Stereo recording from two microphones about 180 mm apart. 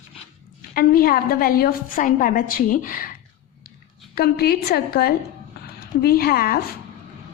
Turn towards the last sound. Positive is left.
turn(degrees=55)  # may be behind; listen again after turning